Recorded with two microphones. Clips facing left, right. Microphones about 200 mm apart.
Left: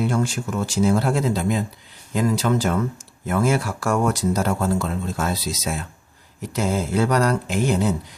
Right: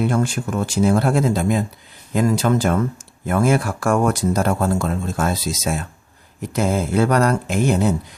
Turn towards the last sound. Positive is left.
turn(degrees=-50)  # may be behind; listen again after turning